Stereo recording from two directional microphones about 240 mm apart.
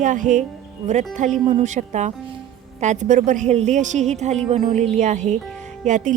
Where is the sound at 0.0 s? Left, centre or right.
Right.